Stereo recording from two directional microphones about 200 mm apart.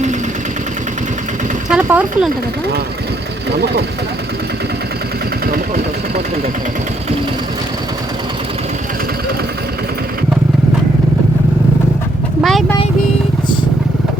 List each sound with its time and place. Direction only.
1.7 s speech: 5° right (ahead or behind)
3.5 s speech: 55° right (ahead or behind)
5.5 s speech: 45° right (ahead or behind)
12.4 s vehicle: centre (ahead or behind)